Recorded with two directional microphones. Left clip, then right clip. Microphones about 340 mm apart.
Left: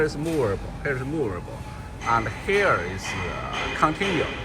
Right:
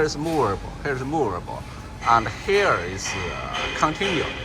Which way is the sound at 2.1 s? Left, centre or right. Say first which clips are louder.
Right 3 dB; centre.